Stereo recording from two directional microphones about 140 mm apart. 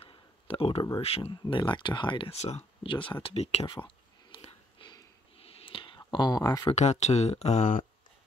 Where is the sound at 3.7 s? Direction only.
35° left (ahead or behind).